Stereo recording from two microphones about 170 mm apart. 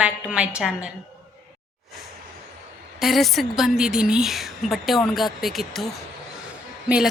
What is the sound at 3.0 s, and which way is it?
A woman's voice, centre (ahead or behind).